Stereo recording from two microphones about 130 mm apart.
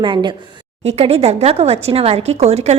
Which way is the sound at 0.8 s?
50° right (ahead or behind).